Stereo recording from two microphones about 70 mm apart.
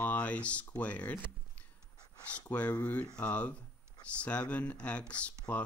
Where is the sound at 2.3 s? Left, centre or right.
Centre.